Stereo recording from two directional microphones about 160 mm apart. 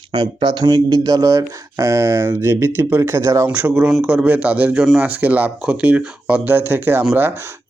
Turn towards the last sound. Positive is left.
turn(degrees=-15)  # may be behind; listen again after turning